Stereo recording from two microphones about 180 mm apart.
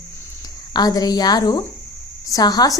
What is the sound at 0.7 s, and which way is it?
A woman's voice, 20° left (ahead or behind).